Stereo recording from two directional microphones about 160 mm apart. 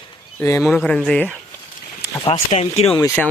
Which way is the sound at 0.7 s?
5° left (ahead or behind).